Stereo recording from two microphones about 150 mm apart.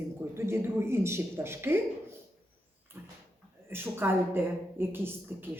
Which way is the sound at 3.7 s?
15° right (ahead or behind).